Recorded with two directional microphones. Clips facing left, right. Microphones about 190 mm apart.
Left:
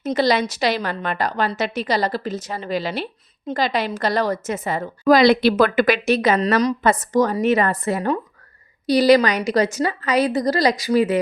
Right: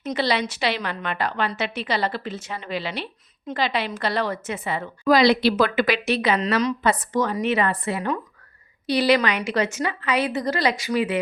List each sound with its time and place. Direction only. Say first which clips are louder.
0.0 s a woman's voice: left 5 dB; 40° left (ahead or behind)